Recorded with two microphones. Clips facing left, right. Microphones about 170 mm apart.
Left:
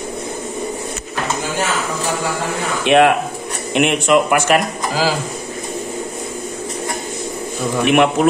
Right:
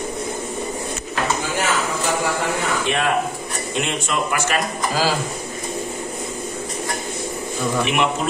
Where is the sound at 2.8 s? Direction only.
75° left (ahead or behind).